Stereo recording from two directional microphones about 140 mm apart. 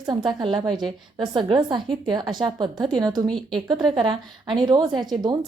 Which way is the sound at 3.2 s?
5° left (ahead or behind).